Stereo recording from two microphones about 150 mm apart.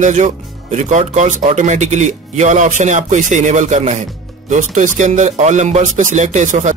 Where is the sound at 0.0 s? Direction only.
55° right (ahead or behind).